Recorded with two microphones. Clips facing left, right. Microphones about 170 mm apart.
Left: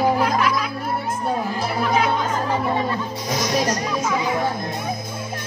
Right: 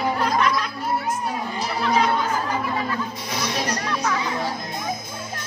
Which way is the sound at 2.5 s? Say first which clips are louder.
Left 4 dB; 30° left (ahead or behind).